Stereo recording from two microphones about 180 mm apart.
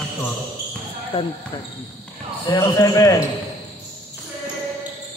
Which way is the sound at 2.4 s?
20° left (ahead or behind).